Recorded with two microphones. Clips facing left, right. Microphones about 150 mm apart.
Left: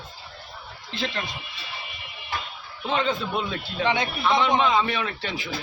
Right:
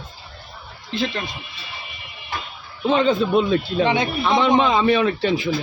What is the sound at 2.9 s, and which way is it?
Speech, 30° right (ahead or behind).